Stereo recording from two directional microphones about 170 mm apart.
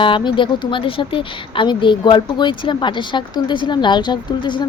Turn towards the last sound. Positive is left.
turn(degrees=30)  # may be behind; listen again after turning